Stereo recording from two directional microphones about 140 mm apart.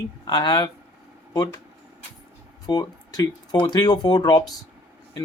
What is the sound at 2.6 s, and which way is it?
Speech, 30° left (ahead or behind).